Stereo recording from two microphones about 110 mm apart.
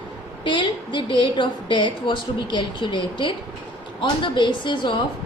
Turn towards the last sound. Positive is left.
turn(degrees=45)  # may be behind; listen again after turning